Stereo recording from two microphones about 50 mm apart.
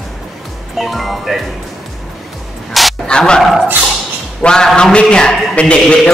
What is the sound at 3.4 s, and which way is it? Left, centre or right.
Speech, centre.